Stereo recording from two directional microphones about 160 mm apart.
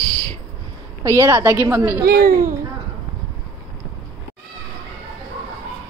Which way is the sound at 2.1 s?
70° right (ahead or behind).